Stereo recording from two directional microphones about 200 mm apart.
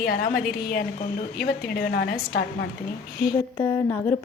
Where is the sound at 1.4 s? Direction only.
50° left (ahead or behind).